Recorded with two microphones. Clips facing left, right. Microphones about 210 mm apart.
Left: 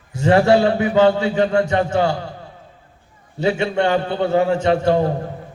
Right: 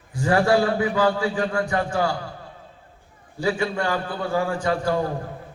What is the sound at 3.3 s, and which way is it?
A man's voice, 25° left (ahead or behind).